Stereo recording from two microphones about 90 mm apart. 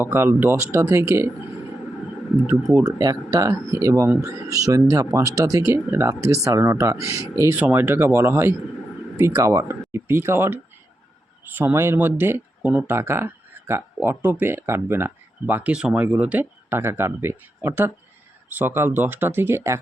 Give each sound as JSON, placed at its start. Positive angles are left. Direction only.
{"t": 0.0, "sound": "speech", "side_deg": -25}
{"t": 2.5, "sound": "speech", "side_deg": -35}
{"t": 7.5, "sound": "speech", "side_deg": -20}